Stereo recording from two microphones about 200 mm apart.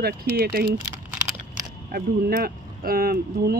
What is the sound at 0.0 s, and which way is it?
Speech, 50° right (ahead or behind).